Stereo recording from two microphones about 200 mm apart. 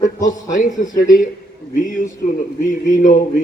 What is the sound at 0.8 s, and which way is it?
A man's voice, 40° left (ahead or behind).